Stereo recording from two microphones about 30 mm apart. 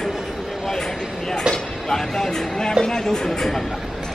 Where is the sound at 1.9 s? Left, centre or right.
Centre.